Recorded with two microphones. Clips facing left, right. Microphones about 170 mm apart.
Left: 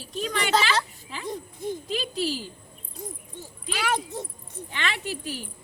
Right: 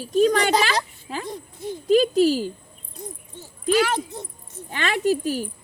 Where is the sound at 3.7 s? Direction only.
45° right (ahead or behind).